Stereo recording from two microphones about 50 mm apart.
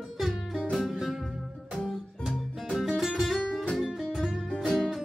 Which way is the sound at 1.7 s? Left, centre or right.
Centre.